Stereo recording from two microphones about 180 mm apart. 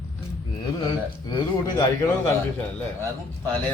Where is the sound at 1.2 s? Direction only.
25° left (ahead or behind).